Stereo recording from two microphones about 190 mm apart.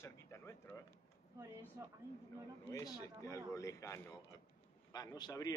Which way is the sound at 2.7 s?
15° left (ahead or behind).